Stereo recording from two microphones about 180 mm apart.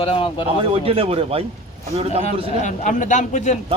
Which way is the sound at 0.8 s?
30° right (ahead or behind).